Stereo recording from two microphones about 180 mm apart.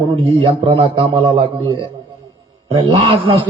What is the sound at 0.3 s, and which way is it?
Speech, 30° right (ahead or behind).